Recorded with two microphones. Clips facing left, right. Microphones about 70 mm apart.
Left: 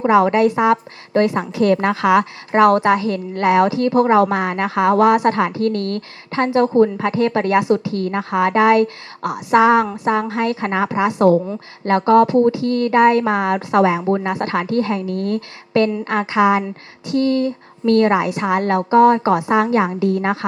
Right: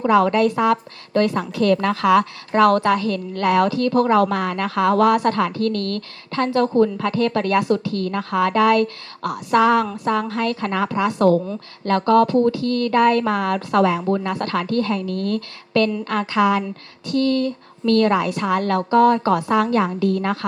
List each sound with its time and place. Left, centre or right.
0.0 s a woman's voice: left